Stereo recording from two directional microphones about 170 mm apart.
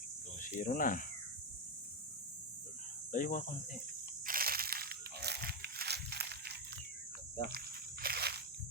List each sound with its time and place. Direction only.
0.3 s speech: 50° left (ahead or behind)
3.1 s speech: 50° left (ahead or behind)
4.3 s crushing: 60° right (ahead or behind)
8.0 s walk: 65° right (ahead or behind)